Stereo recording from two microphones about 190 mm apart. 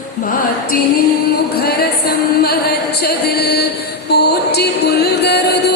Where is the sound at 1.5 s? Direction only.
55° left (ahead or behind).